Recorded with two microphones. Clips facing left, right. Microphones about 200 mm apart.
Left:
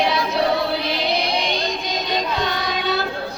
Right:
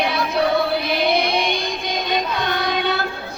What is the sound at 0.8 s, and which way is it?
Music, 55° right (ahead or behind).